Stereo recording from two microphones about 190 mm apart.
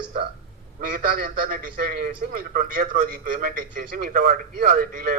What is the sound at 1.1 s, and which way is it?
A man's voice, 55° right (ahead or behind).